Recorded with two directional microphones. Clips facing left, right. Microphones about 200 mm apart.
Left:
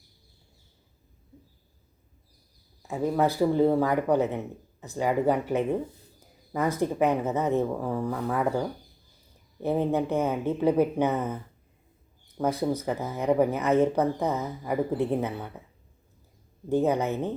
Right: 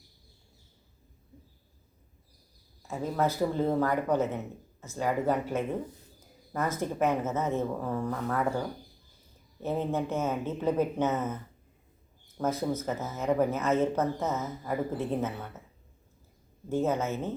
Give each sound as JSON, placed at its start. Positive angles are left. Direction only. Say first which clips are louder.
{"t": 2.8, "sound": "speech", "louder": "left 4 dB", "side_deg": 15}
{"t": 12.4, "sound": "speech", "louder": "left 3 dB", "side_deg": 15}
{"t": 16.6, "sound": "speech", "louder": "left 4 dB", "side_deg": 15}